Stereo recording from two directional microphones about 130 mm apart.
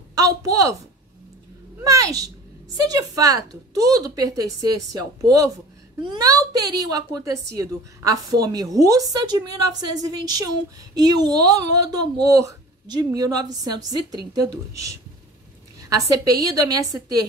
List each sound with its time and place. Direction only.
0.1 s a woman's voice: 25° right (ahead or behind)
1.8 s a woman's voice: 25° right (ahead or behind)